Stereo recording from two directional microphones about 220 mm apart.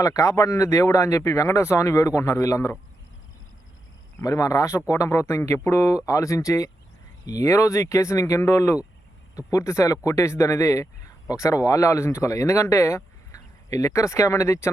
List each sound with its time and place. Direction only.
0.0 s speech: 15° left (ahead or behind)
4.2 s speech: 15° left (ahead or behind)